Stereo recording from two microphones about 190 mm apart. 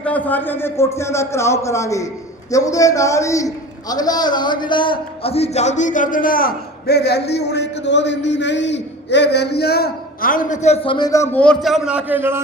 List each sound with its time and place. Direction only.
0.0 s a man's voice: 10° left (ahead or behind); by 12.4 s 10° right (ahead or behind)